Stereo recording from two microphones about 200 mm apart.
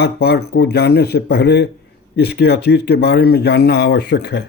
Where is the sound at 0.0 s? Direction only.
55° left (ahead or behind).